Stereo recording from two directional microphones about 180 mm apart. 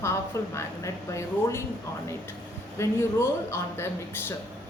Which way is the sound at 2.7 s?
15° left (ahead or behind).